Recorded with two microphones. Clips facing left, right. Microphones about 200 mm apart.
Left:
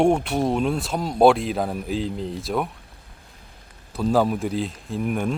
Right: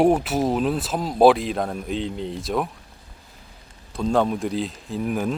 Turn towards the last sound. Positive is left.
turn(degrees=0)  # may be behind; listen again after turning